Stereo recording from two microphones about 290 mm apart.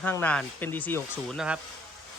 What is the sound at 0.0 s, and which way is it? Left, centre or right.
Speech, centre.